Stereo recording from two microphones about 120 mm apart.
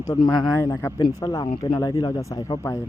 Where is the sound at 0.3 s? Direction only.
5° left (ahead or behind).